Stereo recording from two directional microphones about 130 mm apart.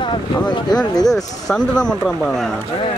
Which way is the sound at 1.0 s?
5° left (ahead or behind).